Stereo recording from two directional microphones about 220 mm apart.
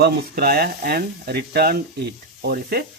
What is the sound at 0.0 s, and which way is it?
Speech, 45° right (ahead or behind).